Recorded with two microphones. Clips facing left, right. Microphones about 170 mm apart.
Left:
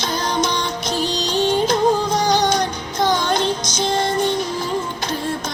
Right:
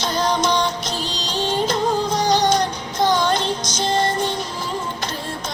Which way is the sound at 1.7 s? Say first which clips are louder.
Left 3 dB; 50° left (ahead or behind).